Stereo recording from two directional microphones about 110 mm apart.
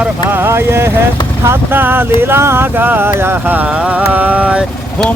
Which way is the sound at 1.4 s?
20° right (ahead or behind).